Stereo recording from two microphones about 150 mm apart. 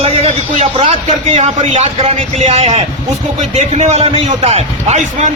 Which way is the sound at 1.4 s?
50° right (ahead or behind).